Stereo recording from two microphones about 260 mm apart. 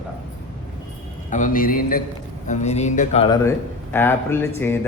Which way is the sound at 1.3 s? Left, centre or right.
Left.